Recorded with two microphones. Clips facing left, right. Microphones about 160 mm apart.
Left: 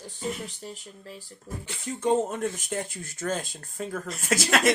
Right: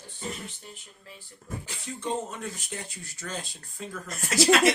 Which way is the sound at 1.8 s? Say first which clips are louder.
Left 8 dB; 50° left (ahead or behind).